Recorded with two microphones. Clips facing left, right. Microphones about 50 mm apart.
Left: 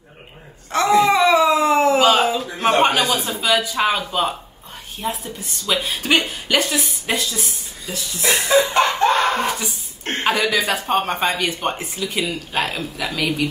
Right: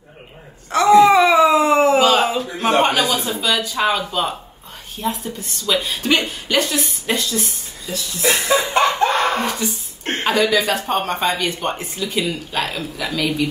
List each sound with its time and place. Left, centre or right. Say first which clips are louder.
0.7 s speech: right 4 dB; centre
1.2 s cat: right 2 dB; centre
2.8 s a sound: even; centre
3.3 s a woman's voice: left 1 dB; centre
8.2 s chuckle: left 1 dB; centre
9.4 s speech: even; centre